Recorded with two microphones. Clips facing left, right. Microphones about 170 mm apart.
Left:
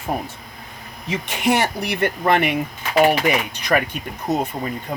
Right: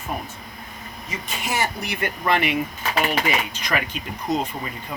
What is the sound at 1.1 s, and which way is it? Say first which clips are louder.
Speech: left 8 dB; 70° left (ahead or behind).